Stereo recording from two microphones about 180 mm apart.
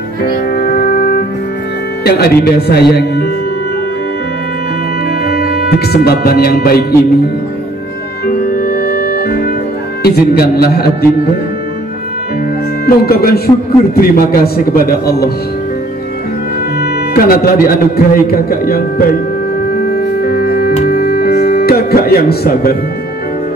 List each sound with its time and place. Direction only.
0.3 s music: 60° left (ahead or behind)
2.0 s speech: 60° left (ahead or behind)
5.2 s speech: 60° left (ahead or behind)
8.3 s music: 50° left (ahead or behind)
10.0 s speech: 60° left (ahead or behind)
12.8 s speech: 55° left (ahead or behind)
16.8 s speech: 55° left (ahead or behind)
20.2 s music: 55° left (ahead or behind)